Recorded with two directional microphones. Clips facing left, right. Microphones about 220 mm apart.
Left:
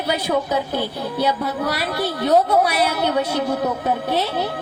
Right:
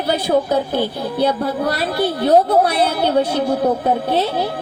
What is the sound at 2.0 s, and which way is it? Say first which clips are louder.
A woman's voice: right 4 dB; 30° right (ahead or behind).